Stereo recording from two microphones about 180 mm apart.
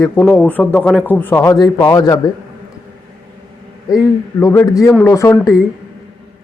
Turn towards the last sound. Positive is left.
turn(degrees=15)  # may be behind; listen again after turning